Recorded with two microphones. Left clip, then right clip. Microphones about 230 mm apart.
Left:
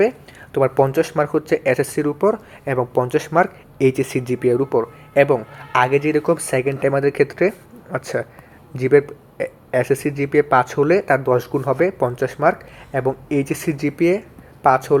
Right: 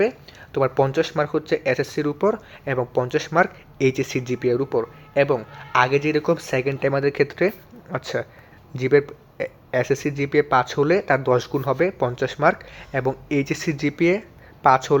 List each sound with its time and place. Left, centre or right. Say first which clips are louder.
0.5 s speech: left 3 dB; centre